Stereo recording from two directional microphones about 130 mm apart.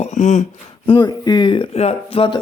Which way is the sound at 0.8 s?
35° left (ahead or behind).